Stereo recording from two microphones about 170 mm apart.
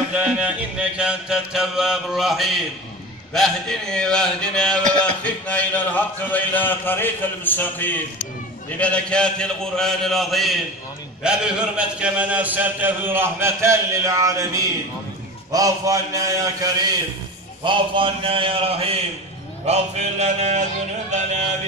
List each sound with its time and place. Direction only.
0.1 s mantra: 10° right (ahead or behind)
5.2 s speech: 10° left (ahead or behind)
8.6 s mantra: 5° left (ahead or behind)
11.2 s a man's voice: 5° right (ahead or behind)
17.6 s mantra: 30° right (ahead or behind)